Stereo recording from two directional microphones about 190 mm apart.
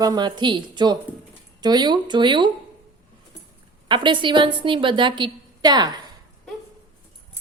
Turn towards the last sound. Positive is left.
turn(degrees=-20)  # may be behind; listen again after turning